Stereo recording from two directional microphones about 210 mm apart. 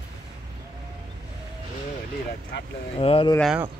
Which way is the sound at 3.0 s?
25° left (ahead or behind).